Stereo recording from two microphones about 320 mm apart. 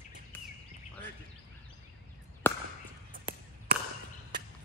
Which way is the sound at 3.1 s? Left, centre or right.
Right.